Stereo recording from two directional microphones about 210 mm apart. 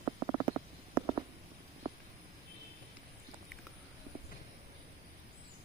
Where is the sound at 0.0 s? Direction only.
20° right (ahead or behind).